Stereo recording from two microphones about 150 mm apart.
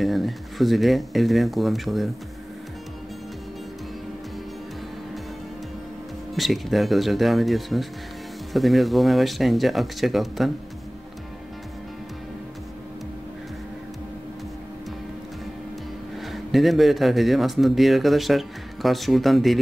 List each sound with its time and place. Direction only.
0.0 s speech: centre (ahead or behind)
6.3 s speech: centre (ahead or behind)
16.2 s speech: centre (ahead or behind)